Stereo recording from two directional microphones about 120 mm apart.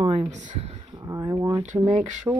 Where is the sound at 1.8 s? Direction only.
90° right.